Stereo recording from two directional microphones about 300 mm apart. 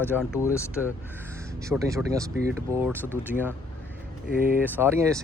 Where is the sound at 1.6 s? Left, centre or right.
Centre.